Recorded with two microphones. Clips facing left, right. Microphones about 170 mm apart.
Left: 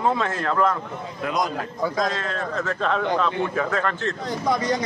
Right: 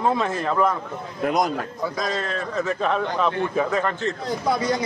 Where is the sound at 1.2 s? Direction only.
50° right (ahead or behind).